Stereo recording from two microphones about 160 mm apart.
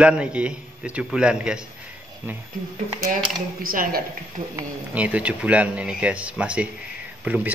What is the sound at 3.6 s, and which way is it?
Speech, 65° right (ahead or behind).